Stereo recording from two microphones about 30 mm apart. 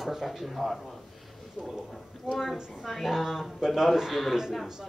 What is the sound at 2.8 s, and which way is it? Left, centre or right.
Speech, centre.